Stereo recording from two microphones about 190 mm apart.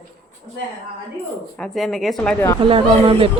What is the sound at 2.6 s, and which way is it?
Speech, 30° right (ahead or behind).